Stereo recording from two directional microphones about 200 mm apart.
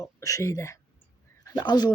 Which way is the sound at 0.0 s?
15° left (ahead or behind).